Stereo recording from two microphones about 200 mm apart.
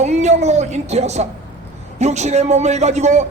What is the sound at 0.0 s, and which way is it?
A woman's voice, 35° right (ahead or behind).